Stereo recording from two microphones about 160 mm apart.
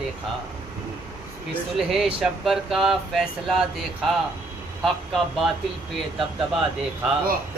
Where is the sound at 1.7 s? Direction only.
Centre (ahead or behind).